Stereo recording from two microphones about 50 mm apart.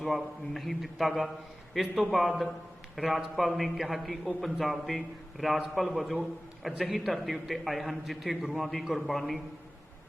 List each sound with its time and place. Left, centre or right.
0.0 s a man's voice: centre